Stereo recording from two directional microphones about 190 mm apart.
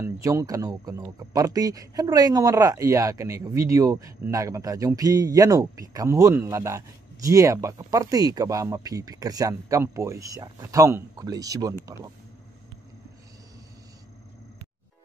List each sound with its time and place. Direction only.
0.0 s speech: 15° right (ahead or behind)